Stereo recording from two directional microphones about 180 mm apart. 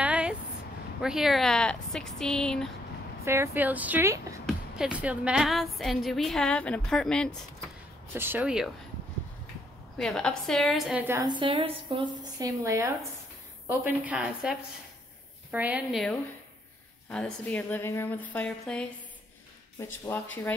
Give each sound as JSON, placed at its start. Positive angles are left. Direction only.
{"t": 0.0, "sound": "a sound", "side_deg": -5}
{"t": 1.0, "sound": "a woman's voice", "side_deg": 0}
{"t": 3.3, "sound": "speech", "side_deg": -10}
{"t": 4.5, "sound": "a woman's voice", "side_deg": -5}
{"t": 8.1, "sound": "speech", "side_deg": -10}
{"t": 9.9, "sound": "a woman's voice", "side_deg": 5}
{"t": 11.1, "sound": "a woman's voice", "side_deg": -25}
{"t": 17.5, "sound": "a woman's voice", "side_deg": 10}